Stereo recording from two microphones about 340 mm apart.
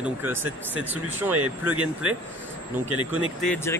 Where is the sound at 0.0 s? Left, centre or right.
Centre.